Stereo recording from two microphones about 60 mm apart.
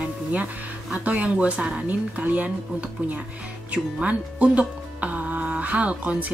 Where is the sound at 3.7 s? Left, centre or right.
Right.